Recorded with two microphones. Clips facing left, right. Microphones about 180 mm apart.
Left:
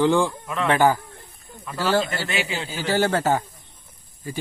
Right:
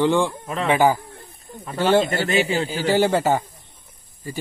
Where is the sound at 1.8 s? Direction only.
20° right (ahead or behind).